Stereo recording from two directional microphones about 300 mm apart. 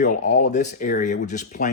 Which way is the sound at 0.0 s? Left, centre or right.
Left.